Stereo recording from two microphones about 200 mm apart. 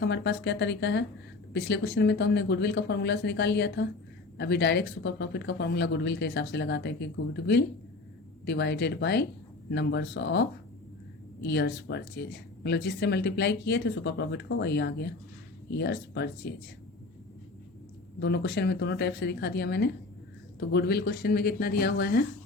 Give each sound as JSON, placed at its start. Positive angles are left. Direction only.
{"t": 0.0, "sound": "speech", "side_deg": 60}
{"t": 18.2, "sound": "speech", "side_deg": 60}